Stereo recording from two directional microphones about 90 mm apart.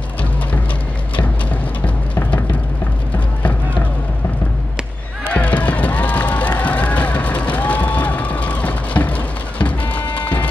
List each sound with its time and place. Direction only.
5.2 s run: 15° left (ahead or behind)
10.1 s music: 15° left (ahead or behind)